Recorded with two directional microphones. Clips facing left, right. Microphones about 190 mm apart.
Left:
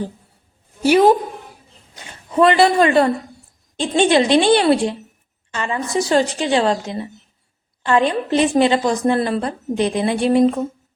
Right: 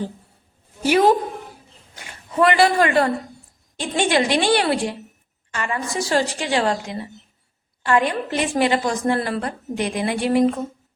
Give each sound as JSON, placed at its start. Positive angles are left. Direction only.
{"t": 2.0, "sound": "a woman's voice", "side_deg": 25}